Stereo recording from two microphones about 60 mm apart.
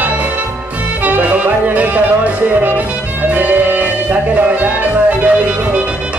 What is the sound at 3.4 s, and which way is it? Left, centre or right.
Music, right.